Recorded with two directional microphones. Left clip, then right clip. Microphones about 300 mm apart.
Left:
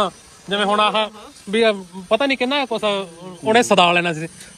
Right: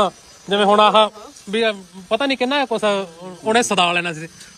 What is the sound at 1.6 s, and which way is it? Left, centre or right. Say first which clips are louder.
Speech: left 4 dB; centre.